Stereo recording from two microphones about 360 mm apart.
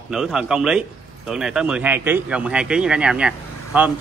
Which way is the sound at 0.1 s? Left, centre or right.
Centre.